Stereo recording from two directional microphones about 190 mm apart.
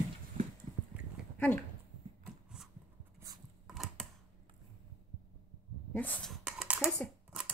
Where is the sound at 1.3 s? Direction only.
10° left (ahead or behind).